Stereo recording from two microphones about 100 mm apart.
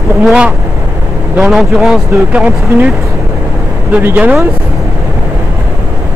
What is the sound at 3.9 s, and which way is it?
Speech, 15° right (ahead or behind).